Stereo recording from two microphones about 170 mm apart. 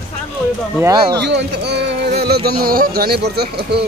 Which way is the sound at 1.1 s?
85° right.